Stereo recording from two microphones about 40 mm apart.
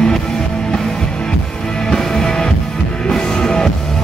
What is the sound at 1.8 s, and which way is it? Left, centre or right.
Music, centre.